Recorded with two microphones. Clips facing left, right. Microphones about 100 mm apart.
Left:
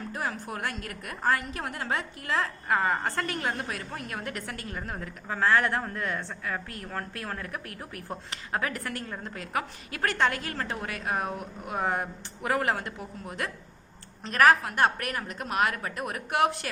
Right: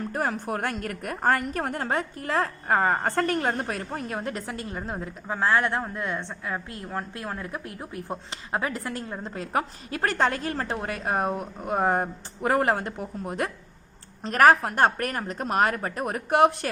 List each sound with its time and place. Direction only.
0.1 s a woman's voice: 50° right (ahead or behind)